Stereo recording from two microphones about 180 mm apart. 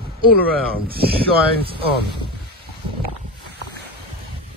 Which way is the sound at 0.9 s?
60° right (ahead or behind).